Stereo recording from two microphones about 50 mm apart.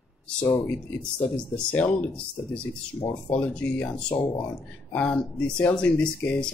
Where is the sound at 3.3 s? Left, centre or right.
Left.